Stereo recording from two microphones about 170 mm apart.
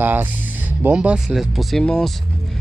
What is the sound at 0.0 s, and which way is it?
Speech, 10° right (ahead or behind).